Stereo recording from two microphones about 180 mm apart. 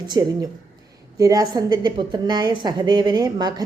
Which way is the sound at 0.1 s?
20° right (ahead or behind).